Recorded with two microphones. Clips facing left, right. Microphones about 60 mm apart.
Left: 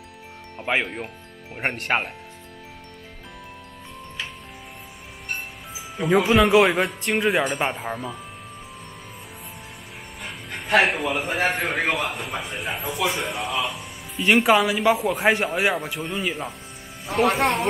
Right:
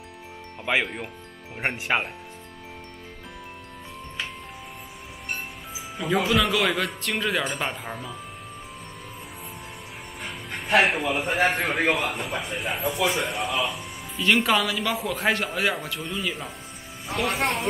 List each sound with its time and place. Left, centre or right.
0.6 s speech: centre
5.9 s speech: centre
6.5 s speech: left
7.2 s speech: centre
10.2 s speech: centre
14.2 s speech: centre
17.3 s speech: centre